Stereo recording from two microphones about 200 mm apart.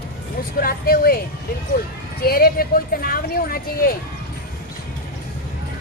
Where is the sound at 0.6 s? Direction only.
45° left (ahead or behind).